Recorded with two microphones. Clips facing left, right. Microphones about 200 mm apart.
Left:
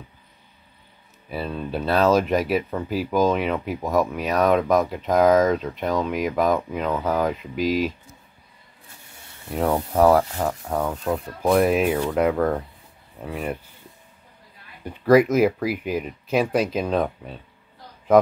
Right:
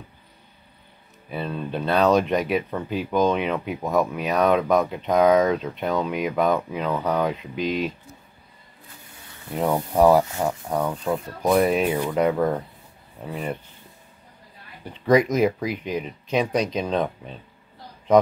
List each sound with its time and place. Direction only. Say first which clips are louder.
1.3 s speech: left 1 dB; 5° left (ahead or behind)
9.5 s speech: left 1 dB; centre (ahead or behind)
11.9 s speech: left 1 dB; 10° right (ahead or behind)
14.9 s speech: left 3 dB; 5° left (ahead or behind)